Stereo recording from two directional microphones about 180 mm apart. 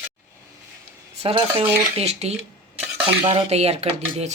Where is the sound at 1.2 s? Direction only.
35° right (ahead or behind).